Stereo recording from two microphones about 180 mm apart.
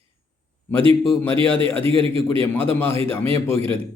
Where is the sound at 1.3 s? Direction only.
30° right (ahead or behind).